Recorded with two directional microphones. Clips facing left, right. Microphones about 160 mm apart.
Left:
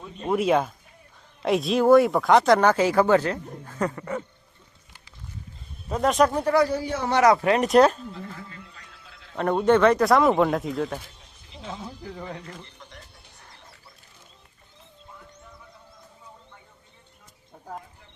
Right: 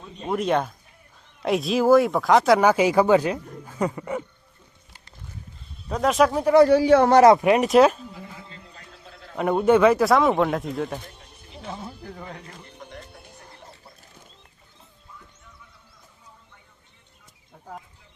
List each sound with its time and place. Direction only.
0.2 s speech: centre (ahead or behind)
5.9 s speech: centre (ahead or behind)
6.7 s a man's voice: 80° right
7.6 s speech: 5° right (ahead or behind)
8.4 s a sound: 35° right (ahead or behind)
9.3 s speech: 10° right (ahead or behind)
11.1 s a sound: 60° right (ahead or behind)
12.7 s music: 55° right (ahead or behind)